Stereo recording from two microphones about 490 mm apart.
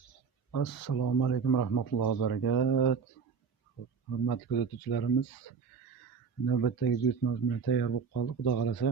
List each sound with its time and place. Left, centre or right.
0.5 s speech: left
4.3 s speech: left
6.4 s speech: left